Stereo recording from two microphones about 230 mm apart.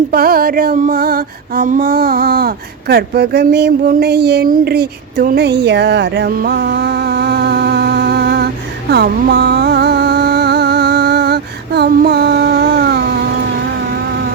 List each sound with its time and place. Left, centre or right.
0.1 s female singing: right
2.9 s a sound: right
8.9 s music: right